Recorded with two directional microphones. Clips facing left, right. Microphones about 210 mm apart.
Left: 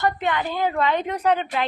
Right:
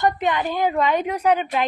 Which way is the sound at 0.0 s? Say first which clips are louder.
Right 2 dB; 15° right (ahead or behind).